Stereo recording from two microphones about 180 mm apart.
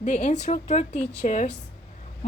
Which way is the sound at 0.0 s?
40° left (ahead or behind).